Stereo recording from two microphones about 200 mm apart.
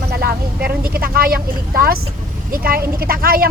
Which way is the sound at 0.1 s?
50° right (ahead or behind).